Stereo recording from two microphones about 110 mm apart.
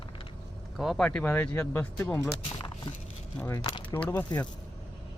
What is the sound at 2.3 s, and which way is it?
Speech, 45° left (ahead or behind).